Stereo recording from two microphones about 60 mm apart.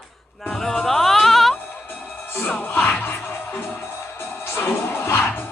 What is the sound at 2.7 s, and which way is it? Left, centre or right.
Music, left.